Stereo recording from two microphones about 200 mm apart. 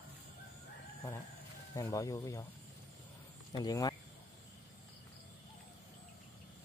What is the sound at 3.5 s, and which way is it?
Speech, 20° left (ahead or behind).